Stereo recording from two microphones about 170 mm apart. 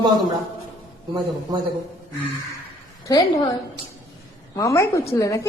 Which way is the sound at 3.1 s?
25° left (ahead or behind).